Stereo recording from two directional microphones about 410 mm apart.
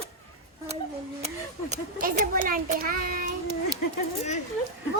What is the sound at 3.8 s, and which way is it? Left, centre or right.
Speech, left.